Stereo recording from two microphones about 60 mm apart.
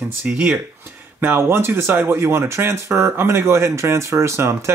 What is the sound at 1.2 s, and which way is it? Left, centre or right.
Speech, right.